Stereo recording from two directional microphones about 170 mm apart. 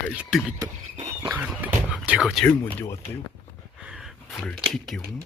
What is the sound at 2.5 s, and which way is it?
Speech, 10° left (ahead or behind).